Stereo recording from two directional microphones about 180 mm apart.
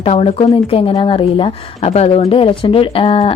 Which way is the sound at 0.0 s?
35° left (ahead or behind).